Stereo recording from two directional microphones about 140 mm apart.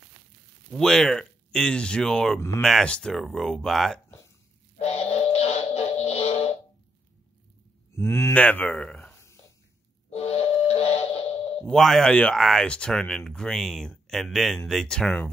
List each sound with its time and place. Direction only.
0.7 s speech: 5° left (ahead or behind)
4.7 s music: 50° left (ahead or behind)
7.9 s speech: 20° left (ahead or behind)
9.1 s a sound: 20° left (ahead or behind)
10.1 s a sound: 45° left (ahead or behind)
11.7 s speech: centre (ahead or behind)